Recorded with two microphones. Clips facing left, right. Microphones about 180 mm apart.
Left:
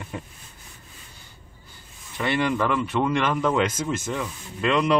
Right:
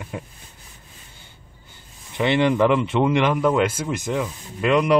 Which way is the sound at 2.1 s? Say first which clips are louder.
Right 5 dB; 20° right (ahead or behind).